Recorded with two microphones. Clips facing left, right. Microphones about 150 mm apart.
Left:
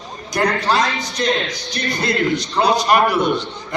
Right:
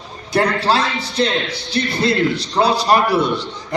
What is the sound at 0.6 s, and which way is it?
A man's voice, 30° right (ahead or behind).